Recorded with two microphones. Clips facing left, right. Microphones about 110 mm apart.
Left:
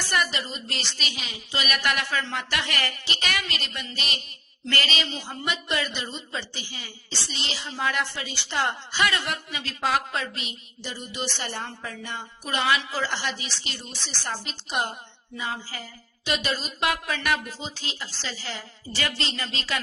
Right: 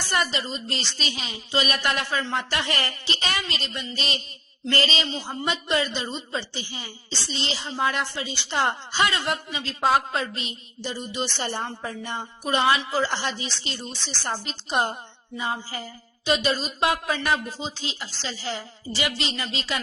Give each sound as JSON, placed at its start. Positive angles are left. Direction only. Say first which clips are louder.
{"t": 0.1, "sound": "a man's voice", "louder": "right 2 dB", "side_deg": -25}